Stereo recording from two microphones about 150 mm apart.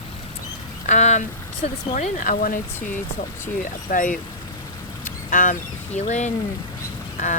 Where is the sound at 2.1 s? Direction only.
65° left (ahead or behind).